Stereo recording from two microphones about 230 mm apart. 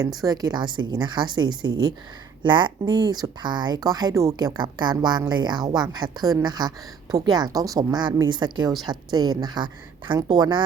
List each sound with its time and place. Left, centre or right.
0.2 s a woman's voice: centre